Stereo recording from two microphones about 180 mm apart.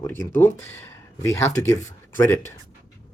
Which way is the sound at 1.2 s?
15° left (ahead or behind).